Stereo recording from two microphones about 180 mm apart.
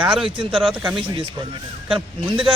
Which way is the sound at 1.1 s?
30° right (ahead or behind).